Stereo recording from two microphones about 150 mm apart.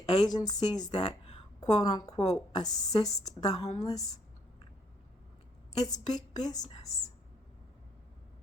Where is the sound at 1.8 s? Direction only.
25° left (ahead or behind).